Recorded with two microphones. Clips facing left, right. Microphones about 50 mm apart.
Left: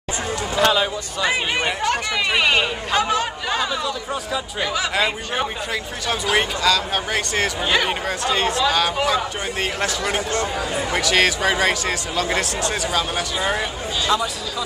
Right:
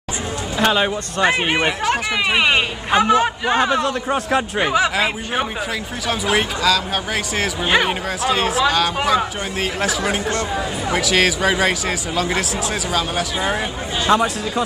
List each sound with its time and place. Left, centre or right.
0.6 s speech: right
1.9 s speech: centre
3.5 s speech: right
3.8 s speech: right
4.6 s speech: right
4.9 s speech: centre
7.6 s speech: centre
8.2 s speech: centre
14.1 s speech: right